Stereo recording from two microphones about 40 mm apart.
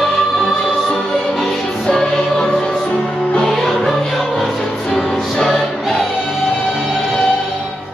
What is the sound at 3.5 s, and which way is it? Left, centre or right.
Music, centre.